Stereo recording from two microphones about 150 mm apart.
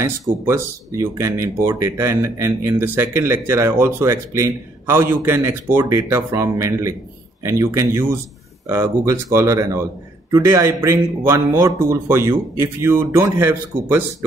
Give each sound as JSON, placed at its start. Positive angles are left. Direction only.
{"t": 0.5, "sound": "speech", "side_deg": -20}